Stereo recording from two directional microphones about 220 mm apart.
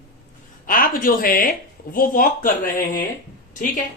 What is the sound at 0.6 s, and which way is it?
Speech, 40° left (ahead or behind).